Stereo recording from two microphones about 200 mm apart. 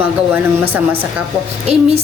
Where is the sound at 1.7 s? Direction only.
30° right (ahead or behind).